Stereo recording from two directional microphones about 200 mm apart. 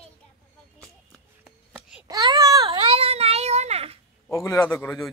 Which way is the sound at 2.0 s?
20° right (ahead or behind).